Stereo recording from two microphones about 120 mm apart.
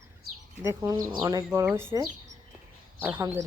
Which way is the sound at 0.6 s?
20° right (ahead or behind).